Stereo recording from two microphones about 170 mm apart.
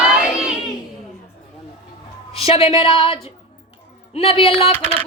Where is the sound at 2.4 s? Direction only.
35° left (ahead or behind).